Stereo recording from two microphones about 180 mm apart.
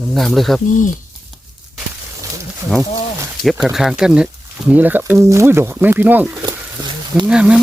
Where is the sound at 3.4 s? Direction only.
5° right (ahead or behind).